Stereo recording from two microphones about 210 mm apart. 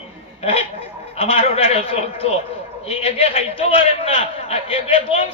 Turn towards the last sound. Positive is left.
turn(degrees=25)  # may be behind; listen again after turning